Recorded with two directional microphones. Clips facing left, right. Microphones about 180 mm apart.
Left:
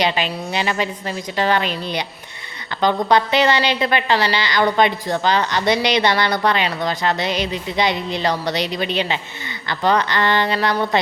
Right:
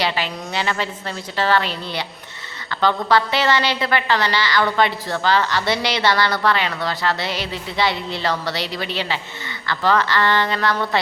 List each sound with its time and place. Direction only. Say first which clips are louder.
0.0 s a woman's voice: left 3 dB; 20° left (ahead or behind)